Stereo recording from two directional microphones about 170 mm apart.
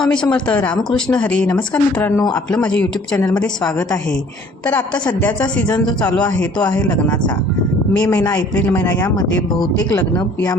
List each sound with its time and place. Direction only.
0.0 s speech: 5° left (ahead or behind)
5.7 s speech: 25° left (ahead or behind)
6.7 s speech: 5° left (ahead or behind)
8.4 s speech: 10° left (ahead or behind)
9.0 s speech: 20° left (ahead or behind)